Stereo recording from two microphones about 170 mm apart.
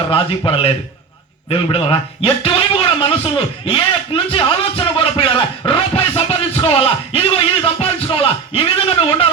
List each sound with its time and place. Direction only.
0.1 s a man's voice: 35° left (ahead or behind)